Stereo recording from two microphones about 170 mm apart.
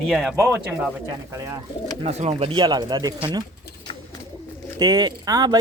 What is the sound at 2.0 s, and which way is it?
Speech, 40° right (ahead or behind).